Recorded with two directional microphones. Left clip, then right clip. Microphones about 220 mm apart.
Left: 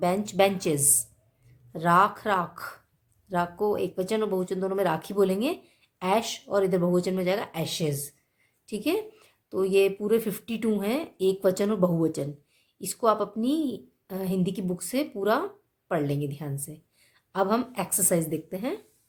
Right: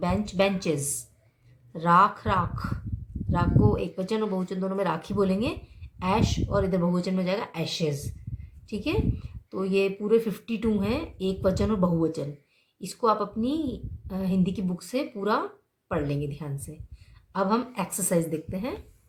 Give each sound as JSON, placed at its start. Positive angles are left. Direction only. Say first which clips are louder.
{"t": 0.0, "sound": "a woman's voice", "louder": "left 2 dB", "side_deg": 50}